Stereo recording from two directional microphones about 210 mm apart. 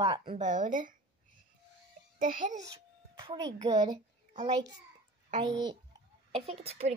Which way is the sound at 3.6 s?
20° right (ahead or behind).